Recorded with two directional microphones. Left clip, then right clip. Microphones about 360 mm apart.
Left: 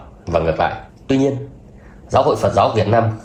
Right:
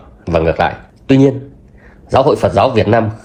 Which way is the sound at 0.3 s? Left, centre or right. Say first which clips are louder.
Right 4 dB; right.